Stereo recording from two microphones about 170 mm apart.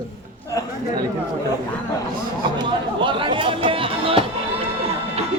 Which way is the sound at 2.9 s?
30° right (ahead or behind).